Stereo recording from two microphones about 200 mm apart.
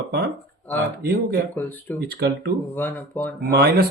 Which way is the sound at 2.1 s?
55° right (ahead or behind).